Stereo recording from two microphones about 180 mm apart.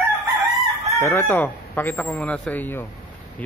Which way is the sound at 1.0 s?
15° left (ahead or behind).